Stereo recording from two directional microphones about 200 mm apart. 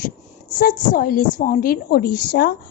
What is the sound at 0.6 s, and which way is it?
A woman's voice, 40° left (ahead or behind).